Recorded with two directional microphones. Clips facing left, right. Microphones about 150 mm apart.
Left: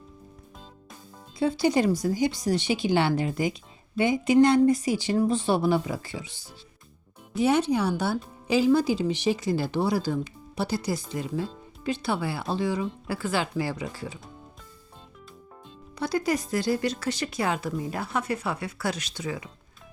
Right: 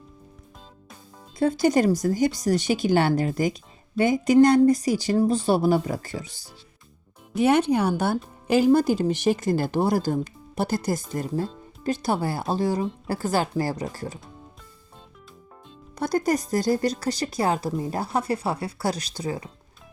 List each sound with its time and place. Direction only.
1.4 s speech: 45° right (ahead or behind)
7.3 s speech: 60° right (ahead or behind); by 14.2 s 45° right (ahead or behind)
16.0 s speech: 45° right (ahead or behind)